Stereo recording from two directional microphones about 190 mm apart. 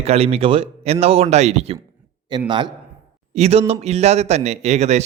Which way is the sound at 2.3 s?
25° right (ahead or behind).